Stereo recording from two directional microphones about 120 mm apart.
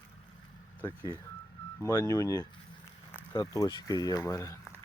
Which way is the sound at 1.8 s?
25° left (ahead or behind).